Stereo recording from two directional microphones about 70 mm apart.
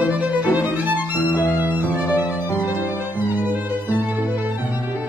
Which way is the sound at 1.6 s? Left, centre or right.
Right.